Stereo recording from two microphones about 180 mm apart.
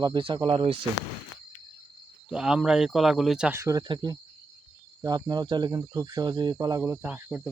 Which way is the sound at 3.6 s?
20° right (ahead or behind).